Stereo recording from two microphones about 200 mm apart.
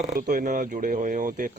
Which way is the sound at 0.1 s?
45° right (ahead or behind).